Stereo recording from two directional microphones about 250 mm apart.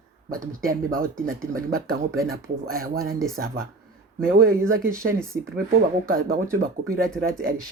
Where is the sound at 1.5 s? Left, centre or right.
Right.